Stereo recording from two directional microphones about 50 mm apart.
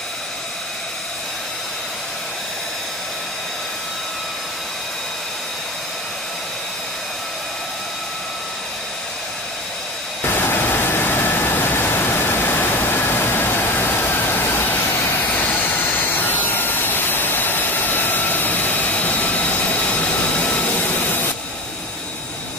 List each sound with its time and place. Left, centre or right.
10.2 s vehicle: left